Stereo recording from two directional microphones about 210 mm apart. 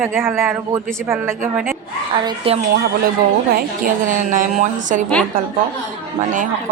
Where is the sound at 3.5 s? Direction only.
40° right (ahead or behind).